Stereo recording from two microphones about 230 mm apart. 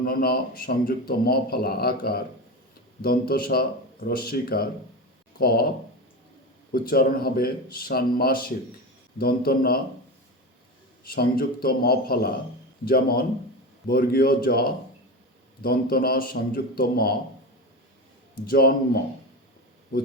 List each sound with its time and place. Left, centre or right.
0.0 s a man's voice: left
6.7 s a man's voice: left
11.1 s a man's voice: left
18.4 s a man's voice: left